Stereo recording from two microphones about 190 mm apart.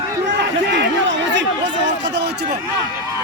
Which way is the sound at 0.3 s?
70° right (ahead or behind).